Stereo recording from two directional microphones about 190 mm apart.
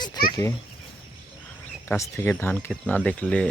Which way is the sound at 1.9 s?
10° left (ahead or behind).